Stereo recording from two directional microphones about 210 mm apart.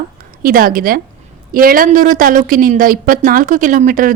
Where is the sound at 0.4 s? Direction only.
45° right (ahead or behind).